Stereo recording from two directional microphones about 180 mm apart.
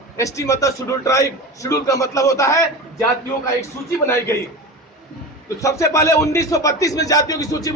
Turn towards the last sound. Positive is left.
turn(degrees=20)  # may be behind; listen again after turning